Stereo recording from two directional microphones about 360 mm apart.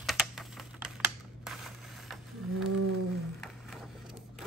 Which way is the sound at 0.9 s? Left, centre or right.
Centre.